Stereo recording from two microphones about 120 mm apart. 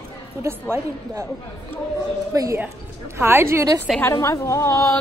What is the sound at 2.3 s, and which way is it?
Speech, 30° right (ahead or behind).